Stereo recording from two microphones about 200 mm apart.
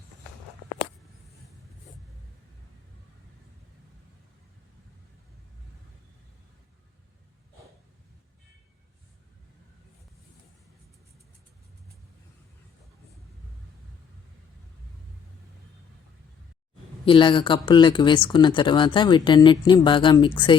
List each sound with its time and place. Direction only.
17.1 s speech: 25° left (ahead or behind)